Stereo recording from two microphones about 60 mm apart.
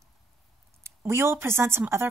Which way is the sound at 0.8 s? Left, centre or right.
Right.